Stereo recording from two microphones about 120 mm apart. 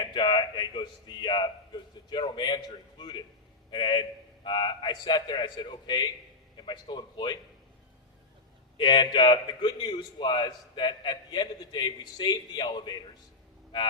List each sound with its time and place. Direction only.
0.0 s a man's voice: 40° left (ahead or behind)
8.8 s a man's voice: 40° left (ahead or behind)